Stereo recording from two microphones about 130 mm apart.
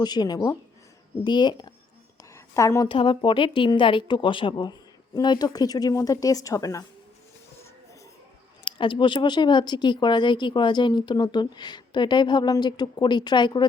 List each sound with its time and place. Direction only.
0.0 s speech: 30° left (ahead or behind)
2.3 s a sound: 25° left (ahead or behind)
2.9 s speech: 40° left (ahead or behind)
8.6 s speech: 40° left (ahead or behind)